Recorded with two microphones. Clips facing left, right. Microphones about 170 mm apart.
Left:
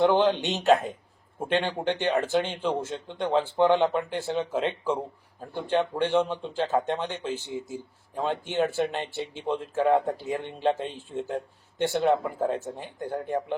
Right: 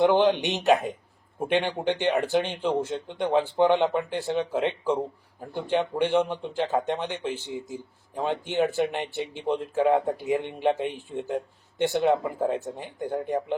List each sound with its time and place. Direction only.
0.0 s speech: 15° right (ahead or behind)